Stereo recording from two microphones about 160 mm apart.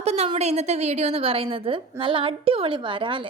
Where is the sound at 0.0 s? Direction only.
40° right (ahead or behind).